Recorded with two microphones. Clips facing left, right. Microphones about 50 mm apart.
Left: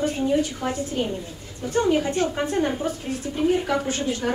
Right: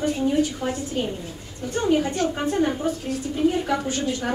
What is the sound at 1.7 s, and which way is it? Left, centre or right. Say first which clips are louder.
A woman's voice: left 1 dB; centre.